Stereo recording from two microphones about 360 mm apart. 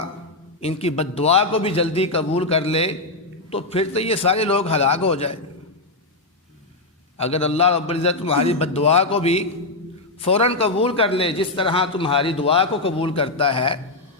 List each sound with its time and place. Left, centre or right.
0.6 s a man's voice: centre
7.2 s a man's voice: centre